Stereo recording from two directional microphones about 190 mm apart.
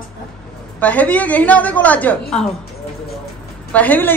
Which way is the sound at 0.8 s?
5° left (ahead or behind).